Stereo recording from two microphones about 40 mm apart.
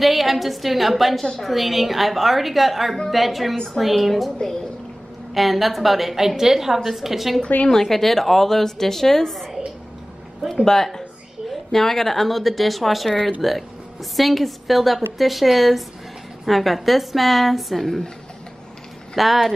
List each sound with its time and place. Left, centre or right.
0.0 s a woman's voice: centre
5.3 s a woman's voice: centre
7.4 s a woman's voice: left
7.7 s a woman's voice: centre
10.5 s a woman's voice: centre
19.1 s speech: centre